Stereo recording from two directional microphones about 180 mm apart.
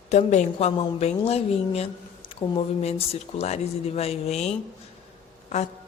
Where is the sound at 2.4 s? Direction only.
15° left (ahead or behind).